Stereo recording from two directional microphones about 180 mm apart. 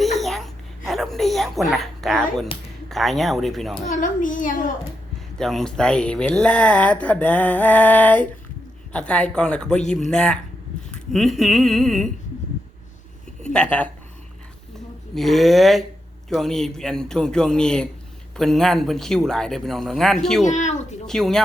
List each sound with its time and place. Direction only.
0.2 s babbling: centre (ahead or behind)
0.9 s speech: centre (ahead or behind)
3.8 s a child's voice: 45° left (ahead or behind)
5.4 s speech: centre (ahead or behind)
13.4 s speech: 5° left (ahead or behind)
15.1 s speech: centre (ahead or behind)
20.4 s speech: 40° left (ahead or behind)
21.1 s speech: centre (ahead or behind)